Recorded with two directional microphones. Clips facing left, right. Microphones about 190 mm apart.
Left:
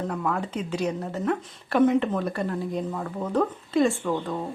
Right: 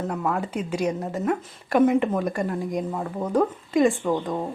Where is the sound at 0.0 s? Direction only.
10° right (ahead or behind).